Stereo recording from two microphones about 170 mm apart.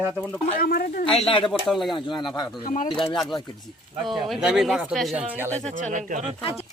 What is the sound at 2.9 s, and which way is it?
Speech, centre (ahead or behind).